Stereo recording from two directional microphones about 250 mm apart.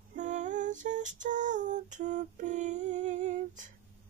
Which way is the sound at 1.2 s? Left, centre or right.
Right.